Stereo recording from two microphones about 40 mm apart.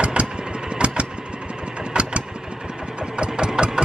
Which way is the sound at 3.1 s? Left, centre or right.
Right.